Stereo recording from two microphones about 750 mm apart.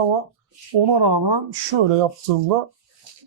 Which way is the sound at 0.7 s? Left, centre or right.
Right.